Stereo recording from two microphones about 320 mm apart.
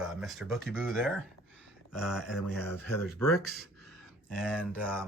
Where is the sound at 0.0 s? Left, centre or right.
Centre.